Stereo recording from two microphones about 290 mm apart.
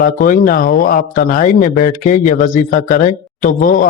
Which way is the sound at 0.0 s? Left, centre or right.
Left.